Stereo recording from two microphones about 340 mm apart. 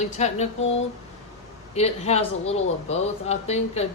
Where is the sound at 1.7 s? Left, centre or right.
Centre.